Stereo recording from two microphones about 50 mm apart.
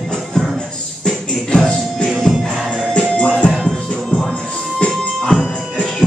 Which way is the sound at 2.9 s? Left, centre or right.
Left.